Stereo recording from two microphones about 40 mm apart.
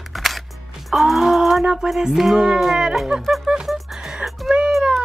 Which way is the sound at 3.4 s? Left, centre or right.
Centre.